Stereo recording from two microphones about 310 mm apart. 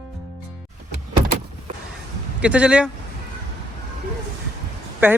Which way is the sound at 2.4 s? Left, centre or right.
Centre.